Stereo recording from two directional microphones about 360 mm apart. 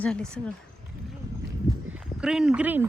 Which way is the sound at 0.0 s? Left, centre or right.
Centre.